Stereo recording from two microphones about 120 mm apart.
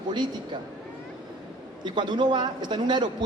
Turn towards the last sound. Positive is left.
turn(degrees=-40)  # may be behind; listen again after turning